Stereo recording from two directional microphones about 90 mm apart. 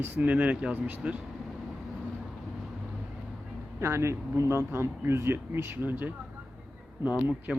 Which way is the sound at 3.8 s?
30° right (ahead or behind).